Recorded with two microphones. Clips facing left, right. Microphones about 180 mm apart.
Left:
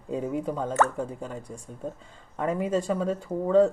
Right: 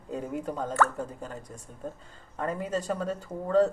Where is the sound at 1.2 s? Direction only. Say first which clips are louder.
Left 4 dB; 10° left (ahead or behind).